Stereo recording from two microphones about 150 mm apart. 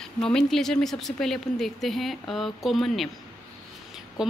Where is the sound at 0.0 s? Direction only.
5° left (ahead or behind).